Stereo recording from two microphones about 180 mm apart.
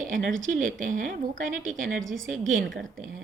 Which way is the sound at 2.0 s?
90° right.